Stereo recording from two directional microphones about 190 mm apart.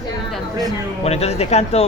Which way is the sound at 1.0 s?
35° left (ahead or behind).